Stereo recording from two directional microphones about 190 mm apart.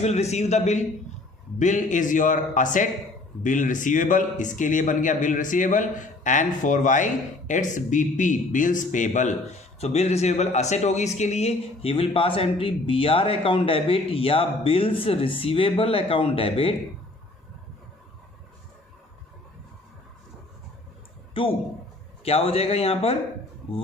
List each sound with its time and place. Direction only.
0.0 s a man's voice: 35° left (ahead or behind)
21.4 s a man's voice: 30° left (ahead or behind)